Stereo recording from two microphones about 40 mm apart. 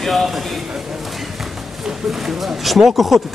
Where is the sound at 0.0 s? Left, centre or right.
Centre.